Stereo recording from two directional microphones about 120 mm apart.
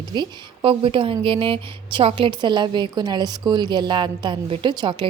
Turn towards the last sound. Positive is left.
turn(degrees=-40)  # may be behind; listen again after turning